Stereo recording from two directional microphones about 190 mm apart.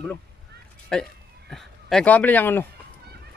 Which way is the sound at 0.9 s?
5° left (ahead or behind).